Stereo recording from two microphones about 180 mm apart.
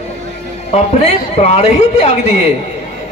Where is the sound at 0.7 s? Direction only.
40° left (ahead or behind).